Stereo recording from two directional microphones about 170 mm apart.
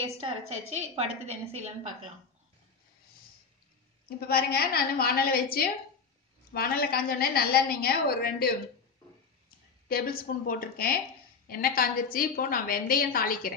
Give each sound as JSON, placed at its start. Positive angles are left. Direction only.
{"t": 0.0, "sound": "a woman's voice", "side_deg": -35}
{"t": 4.3, "sound": "a woman's voice", "side_deg": 65}
{"t": 9.8, "sound": "a woman's voice", "side_deg": 60}